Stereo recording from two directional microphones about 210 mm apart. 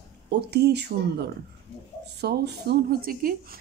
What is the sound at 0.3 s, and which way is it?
Speech, 50° right (ahead or behind).